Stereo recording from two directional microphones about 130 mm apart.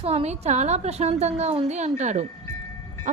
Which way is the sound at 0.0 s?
50° right (ahead or behind).